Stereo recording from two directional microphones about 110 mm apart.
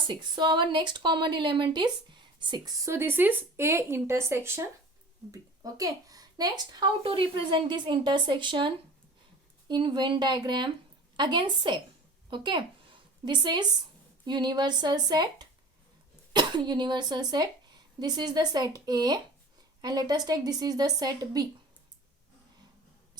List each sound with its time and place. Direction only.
0.1 s speech: 45° right (ahead or behind)
2.8 s a woman's voice: 25° right (ahead or behind)